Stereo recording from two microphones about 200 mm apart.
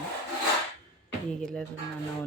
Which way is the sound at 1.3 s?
5° left (ahead or behind).